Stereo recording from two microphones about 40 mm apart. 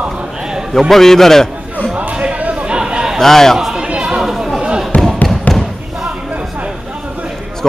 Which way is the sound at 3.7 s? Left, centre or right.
Right.